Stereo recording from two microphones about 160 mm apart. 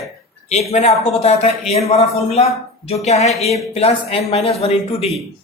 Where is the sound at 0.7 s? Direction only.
40° left (ahead or behind).